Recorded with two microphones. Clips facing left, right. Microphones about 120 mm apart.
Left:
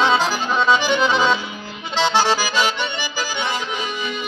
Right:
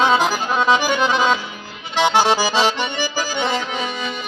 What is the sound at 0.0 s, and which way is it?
Accordion, 10° right (ahead or behind).